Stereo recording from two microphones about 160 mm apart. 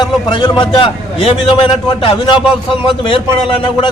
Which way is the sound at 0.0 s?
30° left (ahead or behind).